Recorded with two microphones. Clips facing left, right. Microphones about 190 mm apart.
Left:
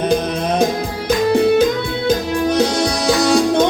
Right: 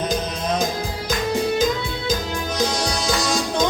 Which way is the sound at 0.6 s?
65° left (ahead or behind).